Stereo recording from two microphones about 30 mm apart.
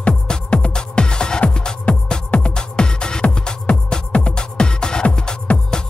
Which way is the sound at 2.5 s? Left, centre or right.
Left.